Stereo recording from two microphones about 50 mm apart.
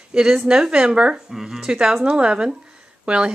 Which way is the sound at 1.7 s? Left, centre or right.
Centre.